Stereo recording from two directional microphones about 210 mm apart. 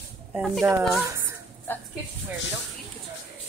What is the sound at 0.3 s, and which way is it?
Speech, 5° right (ahead or behind).